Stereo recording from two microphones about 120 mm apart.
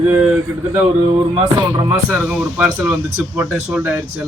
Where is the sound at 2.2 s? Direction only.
10° right (ahead or behind).